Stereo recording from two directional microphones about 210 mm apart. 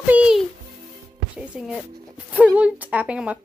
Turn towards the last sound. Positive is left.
turn(degrees=-5)  # may be behind; listen again after turning